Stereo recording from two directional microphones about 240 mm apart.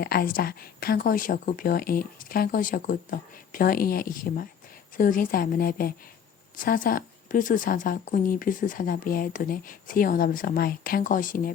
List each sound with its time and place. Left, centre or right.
0.0 s speech: left